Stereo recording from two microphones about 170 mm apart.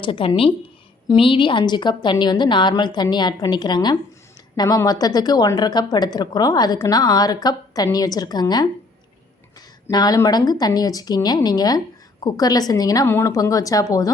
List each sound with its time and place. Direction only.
0.0 s a woman's voice: 30° left (ahead or behind)